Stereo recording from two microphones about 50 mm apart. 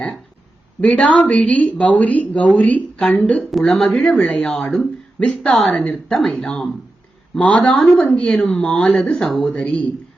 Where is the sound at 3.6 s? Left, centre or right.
Centre.